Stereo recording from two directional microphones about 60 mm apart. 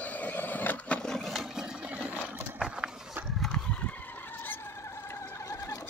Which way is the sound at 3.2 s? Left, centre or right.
Right.